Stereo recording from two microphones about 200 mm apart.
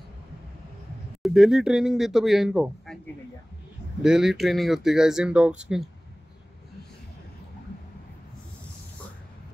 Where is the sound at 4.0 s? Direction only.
Centre (ahead or behind).